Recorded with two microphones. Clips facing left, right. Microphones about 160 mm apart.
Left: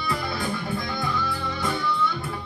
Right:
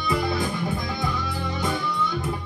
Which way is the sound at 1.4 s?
20° right (ahead or behind).